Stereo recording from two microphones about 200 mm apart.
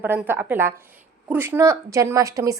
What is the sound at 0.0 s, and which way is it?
A woman's voice, 10° right (ahead or behind).